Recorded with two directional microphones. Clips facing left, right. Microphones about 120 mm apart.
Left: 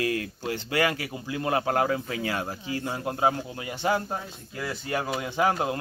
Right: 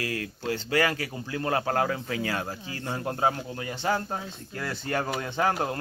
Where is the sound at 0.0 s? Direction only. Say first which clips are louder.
Left 3 dB; 25° left (ahead or behind).